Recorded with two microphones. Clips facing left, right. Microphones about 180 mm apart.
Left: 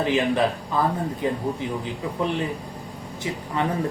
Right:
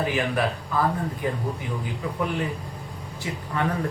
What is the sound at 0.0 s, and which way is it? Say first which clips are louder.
Speech: left 3 dB; 25° left (ahead or behind).